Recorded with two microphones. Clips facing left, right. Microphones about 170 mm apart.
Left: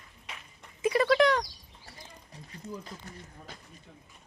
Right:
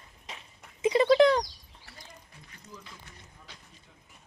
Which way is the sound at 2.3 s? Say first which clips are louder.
Left 12 dB; 40° left (ahead or behind).